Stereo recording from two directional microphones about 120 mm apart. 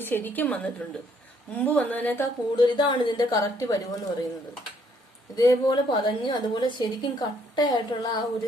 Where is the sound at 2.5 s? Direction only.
40° left (ahead or behind).